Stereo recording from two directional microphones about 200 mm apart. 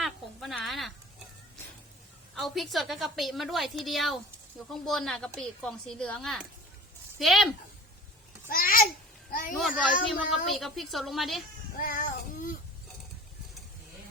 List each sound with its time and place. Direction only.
0.0 s a sound: centre (ahead or behind)
2.3 s a woman's voice: centre (ahead or behind)
8.4 s babbling: 45° left (ahead or behind)
9.6 s a woman's voice: centre (ahead or behind)
11.8 s child singing: 45° left (ahead or behind)